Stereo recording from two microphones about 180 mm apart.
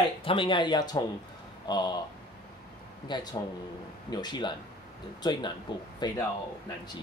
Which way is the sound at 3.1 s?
25° left (ahead or behind).